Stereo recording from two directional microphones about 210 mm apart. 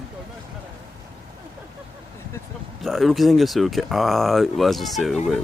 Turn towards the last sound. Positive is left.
turn(degrees=0)  # may be behind; listen again after turning